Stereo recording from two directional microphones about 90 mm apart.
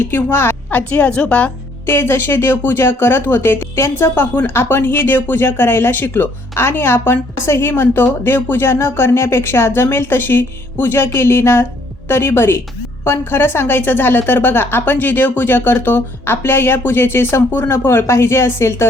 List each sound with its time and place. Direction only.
0.0 s a woman's voice: 20° left (ahead or behind)
1.9 s a woman's voice: 25° left (ahead or behind)